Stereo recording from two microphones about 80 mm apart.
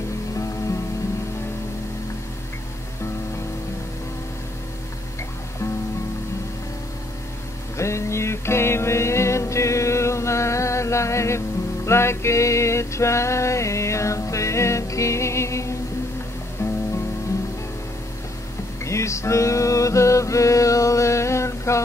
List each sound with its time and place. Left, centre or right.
7.7 s music: left
18.9 s music: left